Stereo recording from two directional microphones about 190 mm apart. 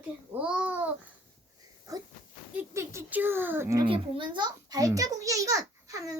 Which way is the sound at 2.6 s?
10° right (ahead or behind).